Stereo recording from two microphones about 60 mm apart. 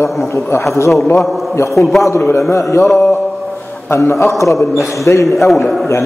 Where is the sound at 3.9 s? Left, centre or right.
Left.